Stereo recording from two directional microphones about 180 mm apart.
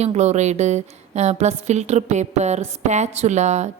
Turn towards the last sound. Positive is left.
turn(degrees=-40)  # may be behind; listen again after turning